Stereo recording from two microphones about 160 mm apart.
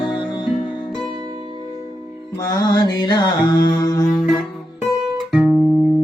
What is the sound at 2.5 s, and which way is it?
Mantra, 25° left (ahead or behind).